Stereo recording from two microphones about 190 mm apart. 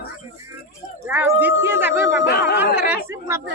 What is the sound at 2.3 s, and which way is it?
Speech, 55° left (ahead or behind).